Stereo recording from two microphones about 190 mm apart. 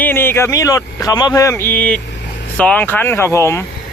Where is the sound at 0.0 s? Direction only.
10° left (ahead or behind).